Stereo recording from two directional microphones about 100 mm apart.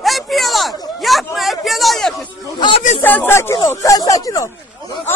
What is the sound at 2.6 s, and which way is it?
Speech, 65° left (ahead or behind).